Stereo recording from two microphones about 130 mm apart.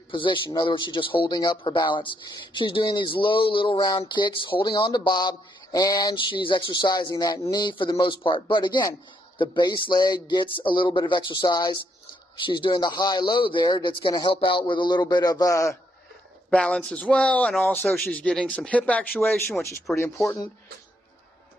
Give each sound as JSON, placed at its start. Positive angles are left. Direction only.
{"t": 0.1, "sound": "speech", "side_deg": 40}
{"t": 16.4, "sound": "speech", "side_deg": 5}
{"t": 19.9, "sound": "speech", "side_deg": 0}